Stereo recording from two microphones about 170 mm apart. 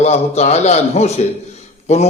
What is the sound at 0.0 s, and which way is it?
A man's voice, 40° left (ahead or behind).